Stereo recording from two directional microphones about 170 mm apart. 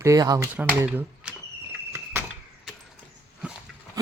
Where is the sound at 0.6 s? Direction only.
10° right (ahead or behind).